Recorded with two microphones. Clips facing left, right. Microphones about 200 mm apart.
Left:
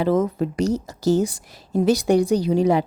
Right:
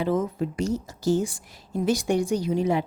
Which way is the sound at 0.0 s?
80° left.